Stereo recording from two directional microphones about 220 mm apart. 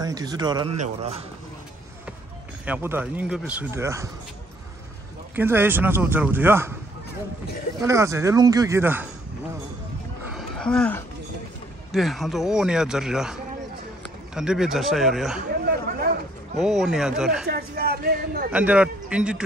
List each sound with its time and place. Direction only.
0.0 s speech: 15° right (ahead or behind)
2.6 s speech: 10° right (ahead or behind)
5.3 s speech: 10° right (ahead or behind)
7.8 s speech: 15° right (ahead or behind)
10.3 s a sound: 5° left (ahead or behind)
11.9 s a man's voice: centre (ahead or behind)
16.5 s a man's voice: centre (ahead or behind)
17.5 s speech: 45° right (ahead or behind)
18.5 s a man's voice: 5° right (ahead or behind)